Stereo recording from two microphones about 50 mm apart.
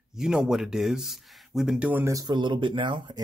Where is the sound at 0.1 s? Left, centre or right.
Centre.